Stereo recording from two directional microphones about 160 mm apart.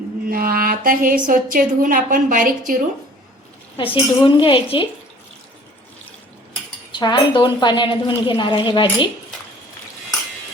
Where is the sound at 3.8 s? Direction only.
35° left (ahead or behind).